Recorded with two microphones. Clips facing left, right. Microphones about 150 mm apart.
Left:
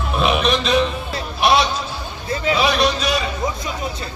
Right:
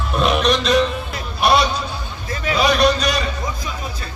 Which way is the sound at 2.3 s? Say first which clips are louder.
Left 3 dB; 25° left (ahead or behind).